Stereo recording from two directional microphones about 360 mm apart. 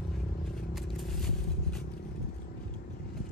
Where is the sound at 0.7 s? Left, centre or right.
Centre.